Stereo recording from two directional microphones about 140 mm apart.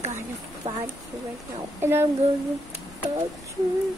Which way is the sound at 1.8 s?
15° right (ahead or behind).